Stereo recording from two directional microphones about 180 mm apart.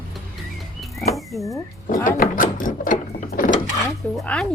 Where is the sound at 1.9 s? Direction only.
50° left (ahead or behind).